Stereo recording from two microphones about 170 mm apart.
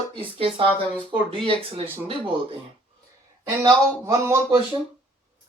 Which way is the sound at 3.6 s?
20° right (ahead or behind).